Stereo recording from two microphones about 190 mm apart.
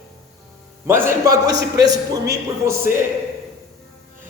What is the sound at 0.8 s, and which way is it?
Speech, 15° right (ahead or behind).